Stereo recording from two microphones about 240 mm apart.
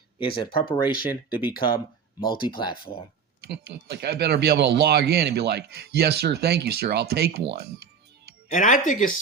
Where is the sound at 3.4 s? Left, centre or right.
Right.